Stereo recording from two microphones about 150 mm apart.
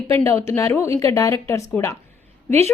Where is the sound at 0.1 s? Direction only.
20° left (ahead or behind).